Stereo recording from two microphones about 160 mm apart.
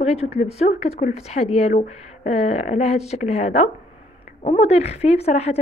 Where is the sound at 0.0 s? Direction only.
40° left (ahead or behind).